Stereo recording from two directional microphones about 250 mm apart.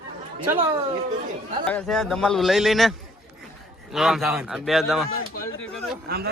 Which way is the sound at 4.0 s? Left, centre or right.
Centre.